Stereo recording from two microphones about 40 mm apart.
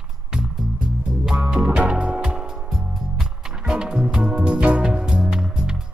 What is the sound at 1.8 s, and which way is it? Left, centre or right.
Music, right.